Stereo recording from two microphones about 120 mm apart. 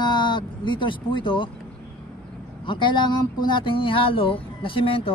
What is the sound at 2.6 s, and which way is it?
Speech, 40° left (ahead or behind).